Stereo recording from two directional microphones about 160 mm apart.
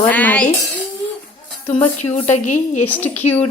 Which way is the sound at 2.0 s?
45° left (ahead or behind).